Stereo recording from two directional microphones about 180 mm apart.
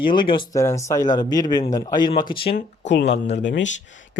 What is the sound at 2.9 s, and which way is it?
Speech, 70° left (ahead or behind).